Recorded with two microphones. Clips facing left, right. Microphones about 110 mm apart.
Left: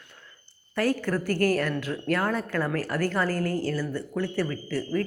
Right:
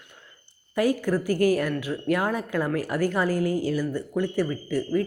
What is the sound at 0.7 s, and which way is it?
A woman's voice, 10° right (ahead or behind).